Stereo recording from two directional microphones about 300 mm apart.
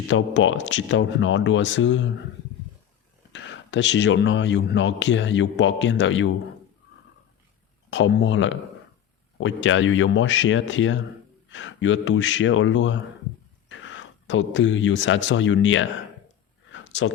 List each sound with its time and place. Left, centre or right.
0.1 s speech: left
3.3 s speech: left
7.9 s speech: left
16.7 s a sound: left